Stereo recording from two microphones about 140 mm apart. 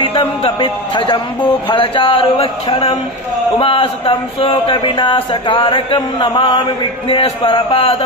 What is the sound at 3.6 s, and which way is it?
Speech, 40° left (ahead or behind).